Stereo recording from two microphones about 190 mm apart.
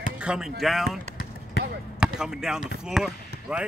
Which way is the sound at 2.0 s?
5° right (ahead or behind).